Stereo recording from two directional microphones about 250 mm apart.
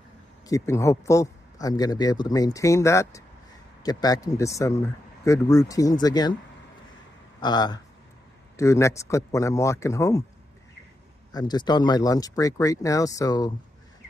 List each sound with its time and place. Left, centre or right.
0.5 s speech: centre
7.3 s speech: centre
11.3 s speech: centre